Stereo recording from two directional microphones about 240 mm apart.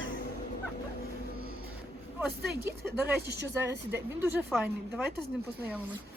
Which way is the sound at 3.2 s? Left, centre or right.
Right.